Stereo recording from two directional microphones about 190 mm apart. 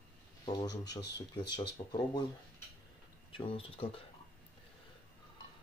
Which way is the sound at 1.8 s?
25° left (ahead or behind).